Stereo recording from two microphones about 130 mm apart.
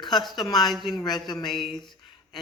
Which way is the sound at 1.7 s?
35° left (ahead or behind).